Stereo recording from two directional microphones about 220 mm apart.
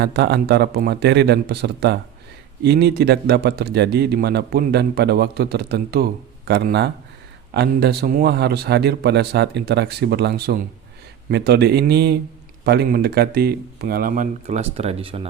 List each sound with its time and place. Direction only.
0.0 s a man's voice: 50° right (ahead or behind); by 15.3 s 25° right (ahead or behind)